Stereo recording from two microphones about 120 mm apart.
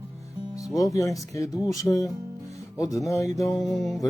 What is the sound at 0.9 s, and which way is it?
Speech, 30° left (ahead or behind).